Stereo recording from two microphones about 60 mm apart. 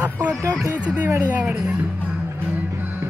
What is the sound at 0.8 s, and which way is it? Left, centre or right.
Speech, right.